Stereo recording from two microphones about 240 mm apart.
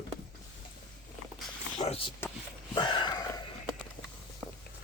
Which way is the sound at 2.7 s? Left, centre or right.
Centre.